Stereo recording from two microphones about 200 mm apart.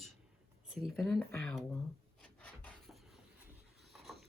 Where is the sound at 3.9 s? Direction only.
Centre (ahead or behind).